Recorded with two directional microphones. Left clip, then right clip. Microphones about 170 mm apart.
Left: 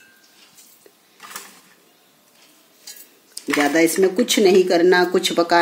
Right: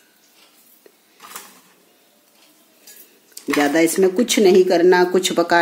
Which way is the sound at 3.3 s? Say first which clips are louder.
Right 1 dB; 10° right (ahead or behind).